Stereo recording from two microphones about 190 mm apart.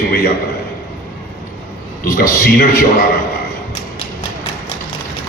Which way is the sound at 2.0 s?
50° left (ahead or behind).